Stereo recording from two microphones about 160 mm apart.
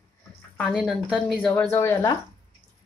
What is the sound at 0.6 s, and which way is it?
Speech, centre (ahead or behind).